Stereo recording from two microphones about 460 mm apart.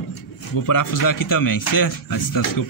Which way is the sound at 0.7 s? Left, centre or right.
Left.